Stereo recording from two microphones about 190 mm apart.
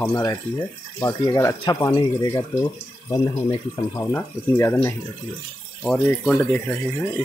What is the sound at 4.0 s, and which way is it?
Speech, 10° left (ahead or behind).